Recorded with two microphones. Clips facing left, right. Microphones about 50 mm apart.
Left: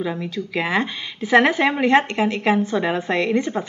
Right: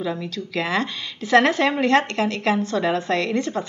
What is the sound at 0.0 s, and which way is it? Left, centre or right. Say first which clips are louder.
A woman's voice: left 2 dB; centre.